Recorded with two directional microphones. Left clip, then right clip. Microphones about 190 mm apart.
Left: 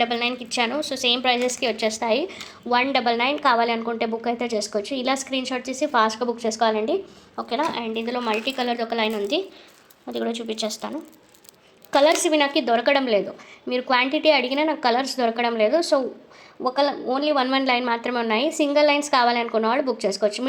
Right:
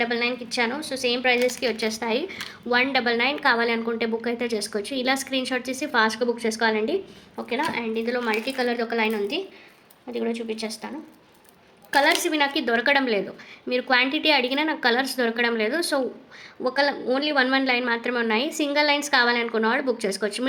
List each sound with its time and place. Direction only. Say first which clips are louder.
0.0 s a woman's voice: left 1 dB; 15° left (ahead or behind)
11.9 s a woman's voice: left 2 dB; 15° left (ahead or behind)